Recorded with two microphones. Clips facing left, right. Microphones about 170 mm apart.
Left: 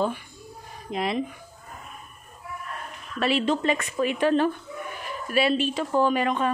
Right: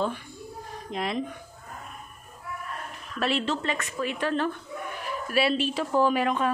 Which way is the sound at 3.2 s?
Centre (ahead or behind).